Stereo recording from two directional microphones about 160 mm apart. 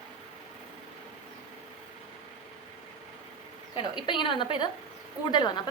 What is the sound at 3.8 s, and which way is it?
A woman's voice, 30° left (ahead or behind).